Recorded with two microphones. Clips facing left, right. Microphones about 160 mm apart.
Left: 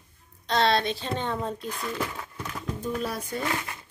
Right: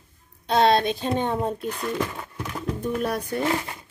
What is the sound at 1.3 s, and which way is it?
Speech, 55° right (ahead or behind).